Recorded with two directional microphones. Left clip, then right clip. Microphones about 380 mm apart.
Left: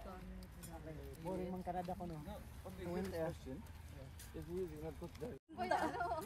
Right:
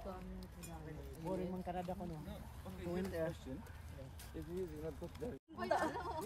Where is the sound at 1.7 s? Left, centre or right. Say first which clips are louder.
Even; centre.